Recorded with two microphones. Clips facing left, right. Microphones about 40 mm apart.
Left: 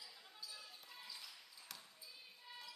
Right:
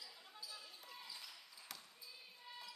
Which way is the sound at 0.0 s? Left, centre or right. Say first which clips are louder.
Right 1 dB; centre.